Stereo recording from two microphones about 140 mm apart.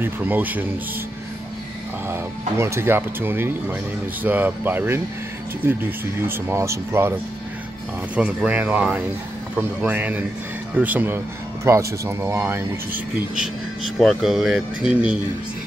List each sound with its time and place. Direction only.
0.0 s speech: 10° right (ahead or behind)
2.0 s speech: 20° right (ahead or behind)
8.2 s speech: 10° right (ahead or behind)
13.9 s speech: centre (ahead or behind)